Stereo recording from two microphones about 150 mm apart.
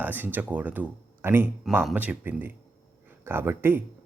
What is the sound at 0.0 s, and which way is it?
A man's voice, 10° right (ahead or behind).